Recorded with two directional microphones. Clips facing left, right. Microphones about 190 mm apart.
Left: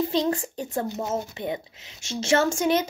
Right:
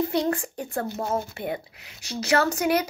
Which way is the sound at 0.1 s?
20° left (ahead or behind).